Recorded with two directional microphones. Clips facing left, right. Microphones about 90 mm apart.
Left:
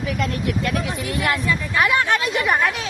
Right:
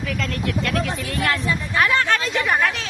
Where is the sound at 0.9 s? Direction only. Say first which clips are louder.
Left 1 dB; 15° left (ahead or behind).